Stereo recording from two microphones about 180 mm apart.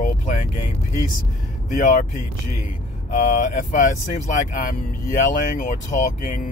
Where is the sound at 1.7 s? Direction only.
45° left (ahead or behind).